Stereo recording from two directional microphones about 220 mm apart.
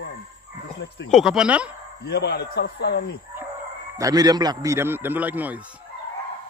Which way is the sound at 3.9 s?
15° right (ahead or behind).